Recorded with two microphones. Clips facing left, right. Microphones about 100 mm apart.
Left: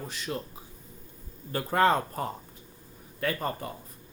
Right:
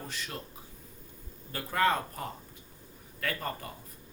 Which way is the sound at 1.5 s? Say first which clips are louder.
Left 5 dB; 35° left (ahead or behind).